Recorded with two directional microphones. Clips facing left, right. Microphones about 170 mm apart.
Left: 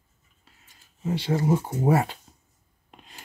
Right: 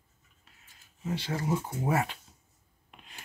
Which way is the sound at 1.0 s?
25° left (ahead or behind).